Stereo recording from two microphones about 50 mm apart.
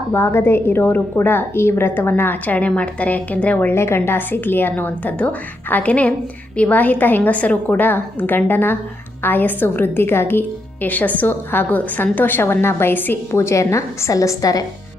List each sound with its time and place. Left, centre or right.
0.1 s a woman's voice: left
2.6 s a woman's voice: left
3.7 s a woman's voice: left
13.3 s a woman's voice: left